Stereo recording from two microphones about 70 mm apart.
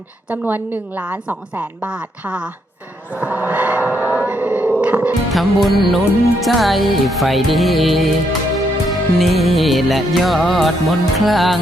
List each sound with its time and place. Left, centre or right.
0.3 s a woman's voice: right
3.2 s a sound: right
5.3 s music: centre